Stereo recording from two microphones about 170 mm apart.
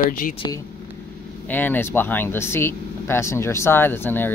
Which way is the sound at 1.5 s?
10° left (ahead or behind).